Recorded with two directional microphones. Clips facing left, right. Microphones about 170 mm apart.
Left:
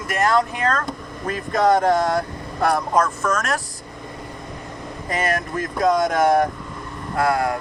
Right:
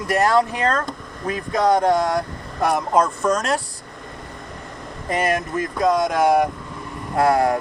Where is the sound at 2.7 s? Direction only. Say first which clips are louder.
Right 1 dB; 30° right (ahead or behind).